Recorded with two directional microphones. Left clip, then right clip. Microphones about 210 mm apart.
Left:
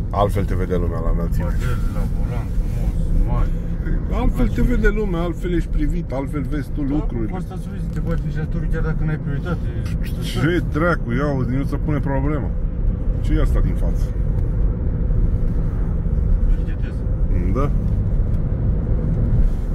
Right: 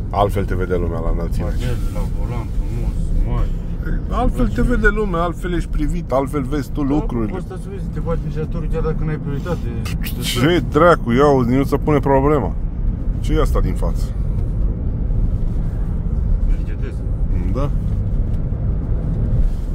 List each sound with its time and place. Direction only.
0.1 s speech: 5° right (ahead or behind)
4.1 s speech: 25° right (ahead or behind)
5.8 s speech: 50° right (ahead or behind)
10.2 s speech: 55° right (ahead or behind)
13.3 s speech: 40° right (ahead or behind)